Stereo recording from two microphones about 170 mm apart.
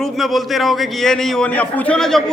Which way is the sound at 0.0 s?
Centre (ahead or behind).